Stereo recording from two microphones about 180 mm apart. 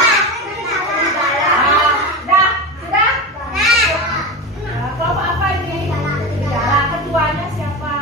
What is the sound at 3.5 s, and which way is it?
Children playing, centre (ahead or behind).